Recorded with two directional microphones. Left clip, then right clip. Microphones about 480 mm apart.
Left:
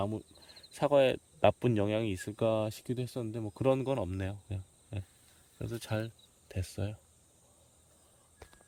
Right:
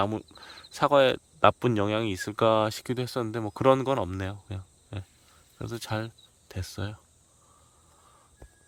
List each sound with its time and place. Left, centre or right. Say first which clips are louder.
0.0 s speech: right 8 dB; centre